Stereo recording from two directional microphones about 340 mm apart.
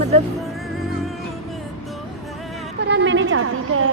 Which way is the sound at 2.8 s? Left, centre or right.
Right.